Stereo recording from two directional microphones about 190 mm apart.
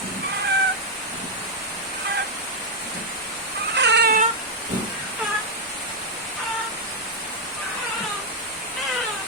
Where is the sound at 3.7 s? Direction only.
65° right (ahead or behind).